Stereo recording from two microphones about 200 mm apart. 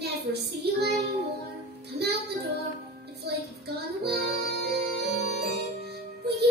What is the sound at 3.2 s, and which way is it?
Child singing, 55° right (ahead or behind).